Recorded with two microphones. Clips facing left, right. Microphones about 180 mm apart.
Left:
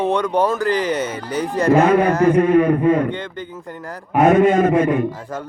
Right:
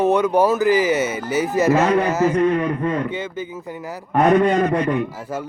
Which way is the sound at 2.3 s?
55° left (ahead or behind).